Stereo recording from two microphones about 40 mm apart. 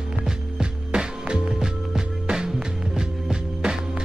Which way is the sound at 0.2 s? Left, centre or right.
Centre.